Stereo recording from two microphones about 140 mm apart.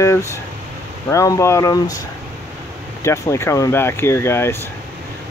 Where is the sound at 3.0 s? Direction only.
20° left (ahead or behind).